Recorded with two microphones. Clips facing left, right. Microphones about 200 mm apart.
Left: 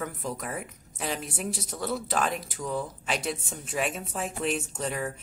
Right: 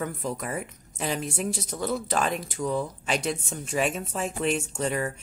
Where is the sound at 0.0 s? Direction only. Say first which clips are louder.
Right 3 dB; centre (ahead or behind).